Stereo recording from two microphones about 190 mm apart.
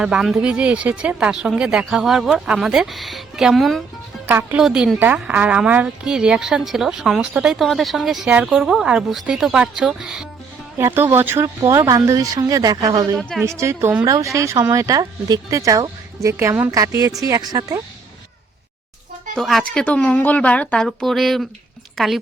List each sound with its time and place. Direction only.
0.0 s a woman's voice: 5° right (ahead or behind)
4.3 s a woman's voice: 10° right (ahead or behind)
13.1 s a woman's voice: centre (ahead or behind)
13.4 s speech: 15° right (ahead or behind)
19.4 s a woman's voice: centre (ahead or behind)